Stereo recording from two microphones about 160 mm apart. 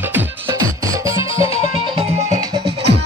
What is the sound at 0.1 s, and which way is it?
Music, 20° right (ahead or behind).